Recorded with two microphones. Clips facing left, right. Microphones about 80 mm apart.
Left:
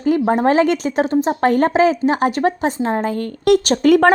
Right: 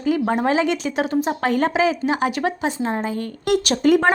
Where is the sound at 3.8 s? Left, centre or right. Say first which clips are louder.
Left 4 dB; left.